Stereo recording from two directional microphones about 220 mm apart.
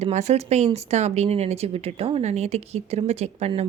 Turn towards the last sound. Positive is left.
turn(degrees=-30)  # may be behind; listen again after turning